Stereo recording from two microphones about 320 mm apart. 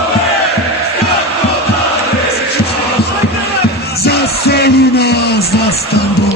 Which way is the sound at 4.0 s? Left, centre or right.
Left.